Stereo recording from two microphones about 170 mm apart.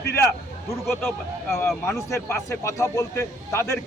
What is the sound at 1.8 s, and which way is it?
Speech, 15° left (ahead or behind).